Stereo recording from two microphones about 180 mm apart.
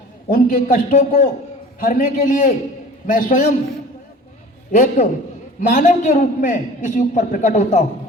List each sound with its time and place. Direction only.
0.3 s a man's voice: 50° left (ahead or behind)
4.7 s a man's voice: 45° left (ahead or behind)